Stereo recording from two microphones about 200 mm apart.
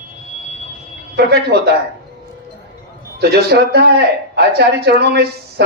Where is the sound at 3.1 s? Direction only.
55° right (ahead or behind).